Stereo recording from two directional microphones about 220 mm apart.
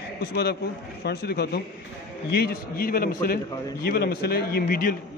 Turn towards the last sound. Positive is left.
turn(degrees=40)  # may be behind; listen again after turning